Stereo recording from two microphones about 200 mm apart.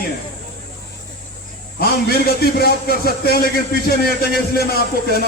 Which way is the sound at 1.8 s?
50° left (ahead or behind).